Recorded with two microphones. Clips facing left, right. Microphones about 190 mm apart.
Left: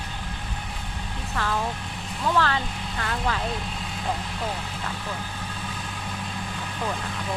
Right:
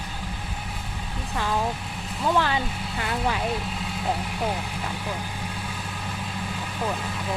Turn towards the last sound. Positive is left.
turn(degrees=-5)  # may be behind; listen again after turning